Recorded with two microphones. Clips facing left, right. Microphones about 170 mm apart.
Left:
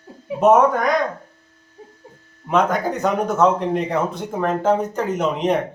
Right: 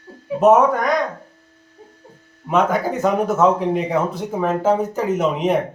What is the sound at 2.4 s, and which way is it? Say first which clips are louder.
Speech: right 1 dB; centre (ahead or behind).